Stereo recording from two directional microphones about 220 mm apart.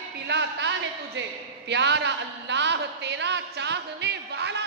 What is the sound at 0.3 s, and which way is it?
A man's voice, 50° right (ahead or behind).